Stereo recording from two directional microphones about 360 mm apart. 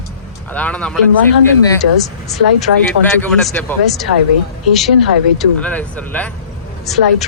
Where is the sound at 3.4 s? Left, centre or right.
Centre.